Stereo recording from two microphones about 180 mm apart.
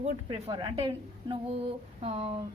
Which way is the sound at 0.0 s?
35° right (ahead or behind).